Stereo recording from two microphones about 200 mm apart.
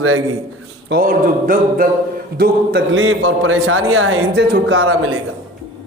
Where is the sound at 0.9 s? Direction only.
45° right (ahead or behind).